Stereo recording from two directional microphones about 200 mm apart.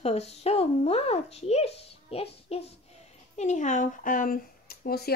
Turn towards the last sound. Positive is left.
turn(degrees=50)  # may be behind; listen again after turning